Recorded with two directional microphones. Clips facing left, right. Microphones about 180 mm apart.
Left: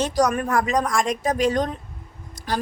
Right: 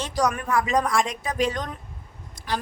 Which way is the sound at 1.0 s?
45° left (ahead or behind).